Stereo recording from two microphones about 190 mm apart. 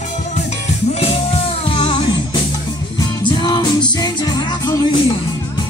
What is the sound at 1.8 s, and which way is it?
Music, 25° left (ahead or behind).